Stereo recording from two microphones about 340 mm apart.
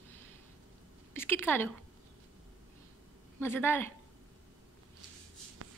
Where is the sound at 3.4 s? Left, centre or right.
Centre.